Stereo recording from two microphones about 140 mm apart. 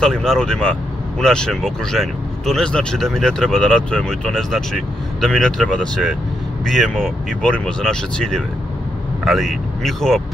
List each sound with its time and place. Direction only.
0.0 s speech: 5° left (ahead or behind)